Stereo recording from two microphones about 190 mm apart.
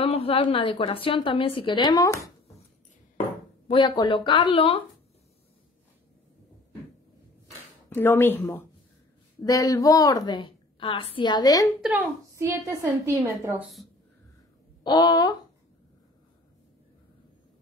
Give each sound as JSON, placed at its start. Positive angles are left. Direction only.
{"t": 0.0, "sound": "a woman's voice", "side_deg": 30}
{"t": 3.6, "sound": "a woman's voice", "side_deg": 25}
{"t": 7.9, "sound": "a woman's voice", "side_deg": 10}
{"t": 11.8, "sound": "a woman's voice", "side_deg": -10}
{"t": 14.8, "sound": "speech", "side_deg": 25}